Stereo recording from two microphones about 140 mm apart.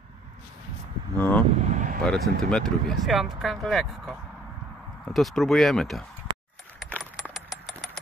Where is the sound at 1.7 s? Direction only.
65° right (ahead or behind).